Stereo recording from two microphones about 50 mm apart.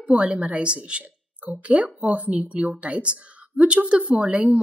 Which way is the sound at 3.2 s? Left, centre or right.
Right.